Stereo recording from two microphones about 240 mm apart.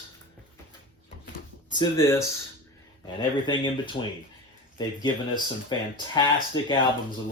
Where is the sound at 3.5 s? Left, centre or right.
Centre.